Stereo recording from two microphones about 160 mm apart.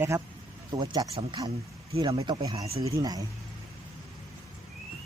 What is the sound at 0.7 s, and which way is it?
Speech, 25° right (ahead or behind).